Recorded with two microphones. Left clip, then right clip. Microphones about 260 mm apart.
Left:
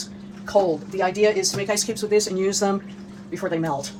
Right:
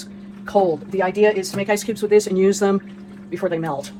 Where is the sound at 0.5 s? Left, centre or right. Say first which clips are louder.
Right 2 dB; right.